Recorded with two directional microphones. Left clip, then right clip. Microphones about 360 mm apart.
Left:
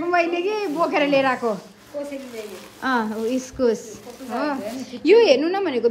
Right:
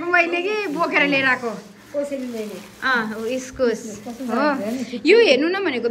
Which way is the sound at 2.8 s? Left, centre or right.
Centre.